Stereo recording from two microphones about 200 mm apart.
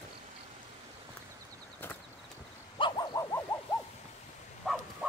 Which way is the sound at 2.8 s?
20° left (ahead or behind).